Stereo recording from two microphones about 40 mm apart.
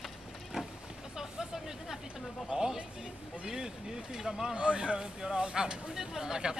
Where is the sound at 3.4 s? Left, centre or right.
Centre.